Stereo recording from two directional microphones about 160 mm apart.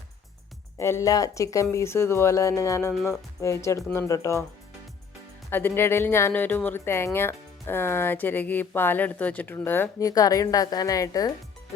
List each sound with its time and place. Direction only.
0.8 s a woman's voice: 15° left (ahead or behind)
5.5 s a woman's voice: 15° left (ahead or behind)